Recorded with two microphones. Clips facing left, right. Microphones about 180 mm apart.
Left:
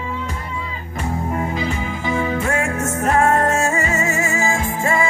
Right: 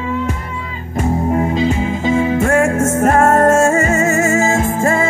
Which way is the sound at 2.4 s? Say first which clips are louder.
Right 8 dB; 45° right (ahead or behind).